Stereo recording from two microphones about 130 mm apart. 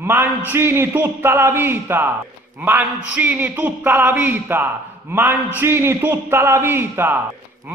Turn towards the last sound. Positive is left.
turn(degrees=-15)  # may be behind; listen again after turning